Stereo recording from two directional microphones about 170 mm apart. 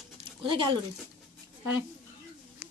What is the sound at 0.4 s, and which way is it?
Speech, 30° right (ahead or behind).